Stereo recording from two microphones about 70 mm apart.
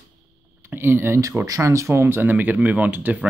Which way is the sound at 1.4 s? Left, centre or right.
Right.